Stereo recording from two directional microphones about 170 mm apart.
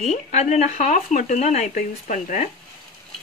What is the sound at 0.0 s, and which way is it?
Speech, 40° left (ahead or behind).